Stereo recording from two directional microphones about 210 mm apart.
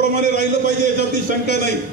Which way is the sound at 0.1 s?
50° left (ahead or behind).